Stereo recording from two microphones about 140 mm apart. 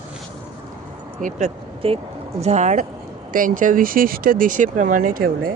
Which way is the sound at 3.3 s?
75° right (ahead or behind).